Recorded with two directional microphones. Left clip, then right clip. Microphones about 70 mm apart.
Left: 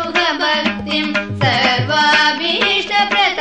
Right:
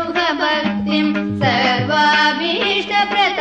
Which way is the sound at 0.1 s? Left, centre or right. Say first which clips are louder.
Left 2 dB; left.